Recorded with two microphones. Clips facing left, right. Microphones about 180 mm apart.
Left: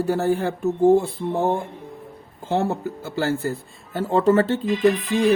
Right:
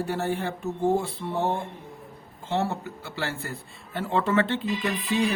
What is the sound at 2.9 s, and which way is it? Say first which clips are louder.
Speech: left 9 dB; 40° left (ahead or behind).